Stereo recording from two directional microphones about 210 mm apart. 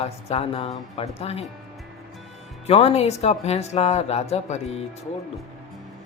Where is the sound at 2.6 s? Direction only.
30° left (ahead or behind).